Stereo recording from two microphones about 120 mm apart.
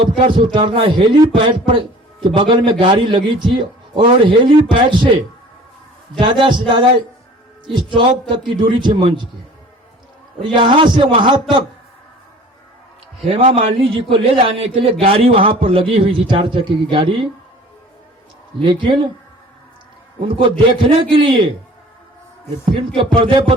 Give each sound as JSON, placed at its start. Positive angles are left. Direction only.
{"t": 0.0, "sound": "a man's voice", "side_deg": -45}
{"t": 10.4, "sound": "a man's voice", "side_deg": -45}
{"t": 13.2, "sound": "a man's voice", "side_deg": -50}
{"t": 18.6, "sound": "a man's voice", "side_deg": -40}
{"t": 20.2, "sound": "a man's voice", "side_deg": -45}
{"t": 23.0, "sound": "a man's voice", "side_deg": -45}